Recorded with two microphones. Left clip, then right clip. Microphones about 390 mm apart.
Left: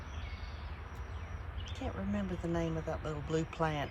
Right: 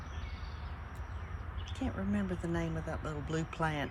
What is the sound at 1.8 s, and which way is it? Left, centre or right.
Speech, centre.